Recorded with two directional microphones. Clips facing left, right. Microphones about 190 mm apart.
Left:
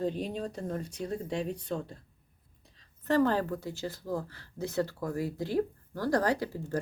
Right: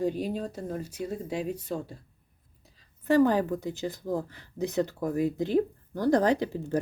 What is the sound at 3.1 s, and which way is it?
Speech, 15° right (ahead or behind).